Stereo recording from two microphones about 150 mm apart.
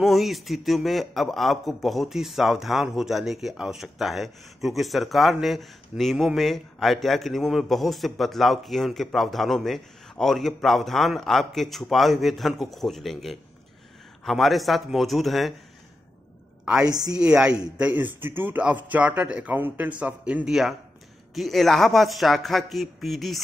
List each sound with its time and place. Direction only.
0.0 s a man's voice: centre (ahead or behind)
16.8 s a woman's voice: 25° right (ahead or behind)
17.2 s a man's voice: 5° right (ahead or behind)